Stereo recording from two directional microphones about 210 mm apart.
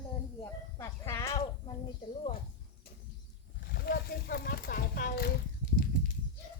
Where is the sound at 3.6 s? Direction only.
50° left (ahead or behind).